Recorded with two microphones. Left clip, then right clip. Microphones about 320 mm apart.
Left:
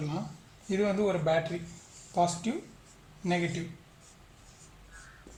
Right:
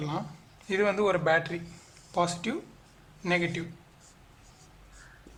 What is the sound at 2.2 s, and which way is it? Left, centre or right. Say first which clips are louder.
Speech: even; right.